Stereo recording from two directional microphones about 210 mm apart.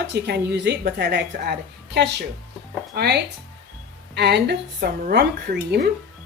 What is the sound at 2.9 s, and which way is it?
Speech, 50° right (ahead or behind).